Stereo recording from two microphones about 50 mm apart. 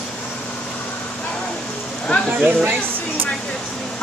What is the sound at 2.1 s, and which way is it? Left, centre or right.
Speech, left.